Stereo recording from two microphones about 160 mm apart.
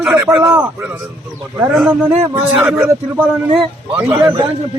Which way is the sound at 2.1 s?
35° right (ahead or behind).